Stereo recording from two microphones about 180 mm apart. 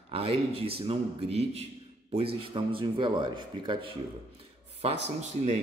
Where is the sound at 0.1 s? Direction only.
30° right (ahead or behind).